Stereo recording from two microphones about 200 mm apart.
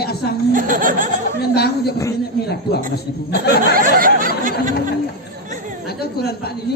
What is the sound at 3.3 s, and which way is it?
Speech, 55° left (ahead or behind).